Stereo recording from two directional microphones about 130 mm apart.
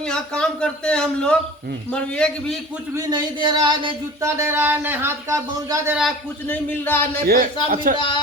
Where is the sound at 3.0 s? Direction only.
30° right (ahead or behind).